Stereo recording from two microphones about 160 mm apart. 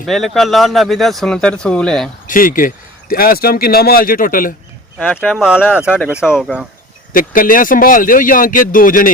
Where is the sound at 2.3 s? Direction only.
60° left (ahead or behind).